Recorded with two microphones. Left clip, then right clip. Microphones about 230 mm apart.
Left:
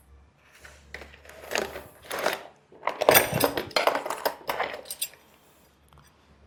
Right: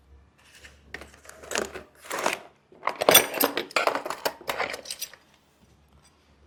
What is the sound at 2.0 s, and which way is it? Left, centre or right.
Shuffling cards, right.